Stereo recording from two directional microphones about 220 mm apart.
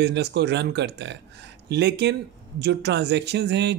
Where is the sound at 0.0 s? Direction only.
50° right (ahead or behind).